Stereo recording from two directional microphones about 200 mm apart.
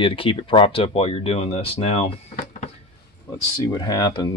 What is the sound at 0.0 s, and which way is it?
Speech, 25° left (ahead or behind).